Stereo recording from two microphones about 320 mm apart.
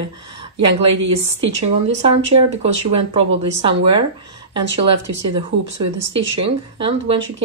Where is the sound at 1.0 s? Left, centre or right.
Right.